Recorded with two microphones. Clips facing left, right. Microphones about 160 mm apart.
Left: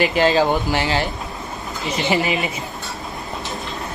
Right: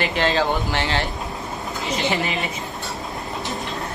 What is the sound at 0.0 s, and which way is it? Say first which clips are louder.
Speech: left 5 dB; 5° left (ahead or behind).